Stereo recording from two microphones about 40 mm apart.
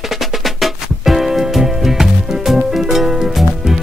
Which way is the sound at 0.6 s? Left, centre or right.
Centre.